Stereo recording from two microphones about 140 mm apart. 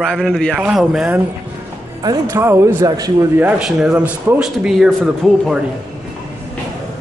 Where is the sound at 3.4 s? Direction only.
10° right (ahead or behind).